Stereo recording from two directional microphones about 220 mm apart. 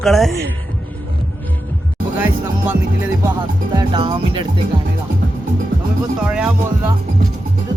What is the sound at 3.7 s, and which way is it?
Speech, 20° right (ahead or behind).